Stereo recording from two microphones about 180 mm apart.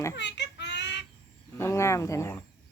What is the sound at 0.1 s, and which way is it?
Child singing, 75° left (ahead or behind).